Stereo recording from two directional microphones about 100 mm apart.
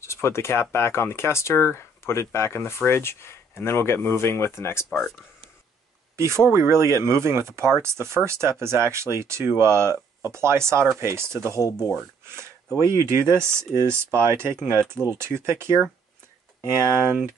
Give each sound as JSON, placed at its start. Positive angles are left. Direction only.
{"t": 0.0, "sound": "speech", "side_deg": 25}
{"t": 4.8, "sound": "speech", "side_deg": 0}
{"t": 6.1, "sound": "speech", "side_deg": -25}
{"t": 12.9, "sound": "speech", "side_deg": -25}